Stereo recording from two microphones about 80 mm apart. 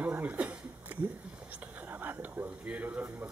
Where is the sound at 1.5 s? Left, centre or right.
Centre.